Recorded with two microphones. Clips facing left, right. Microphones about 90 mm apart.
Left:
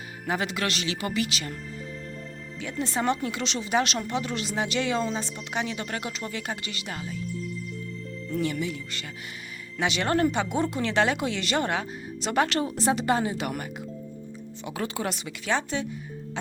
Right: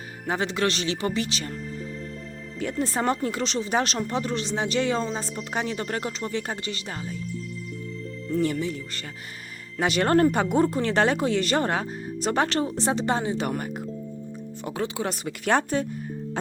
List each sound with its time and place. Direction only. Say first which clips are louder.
0.3 s speech: right 3 dB; 30° right (ahead or behind)
2.6 s speech: right 3 dB; 45° right (ahead or behind)
8.3 s speech: right 3 dB; 40° right (ahead or behind)
14.7 s speech: right 2 dB; 25° right (ahead or behind)
15.1 s a woman's voice: right 5 dB; 45° right (ahead or behind)